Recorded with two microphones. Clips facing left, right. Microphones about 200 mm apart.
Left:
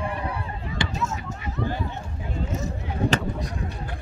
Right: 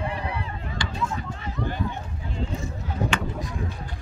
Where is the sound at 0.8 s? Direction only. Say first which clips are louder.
Left 5 dB; 25° left (ahead or behind).